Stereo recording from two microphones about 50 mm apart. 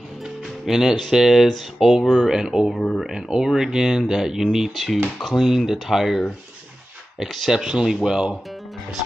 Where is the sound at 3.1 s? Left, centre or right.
Centre.